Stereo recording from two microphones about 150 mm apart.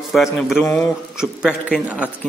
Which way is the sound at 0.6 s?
15° left (ahead or behind).